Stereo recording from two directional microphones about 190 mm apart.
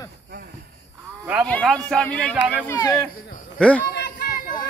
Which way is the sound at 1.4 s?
5° left (ahead or behind).